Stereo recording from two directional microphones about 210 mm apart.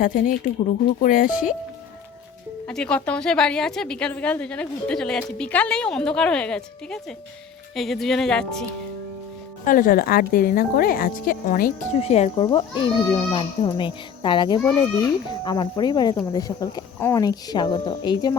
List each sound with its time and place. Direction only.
0.0 s speech: 40° left (ahead or behind)
1.3 s a woman's voice: 5° right (ahead or behind)
2.6 s a woman's voice: 5° left (ahead or behind)
9.6 s speech: 40° left (ahead or behind); by 18.3 s 20° left (ahead or behind)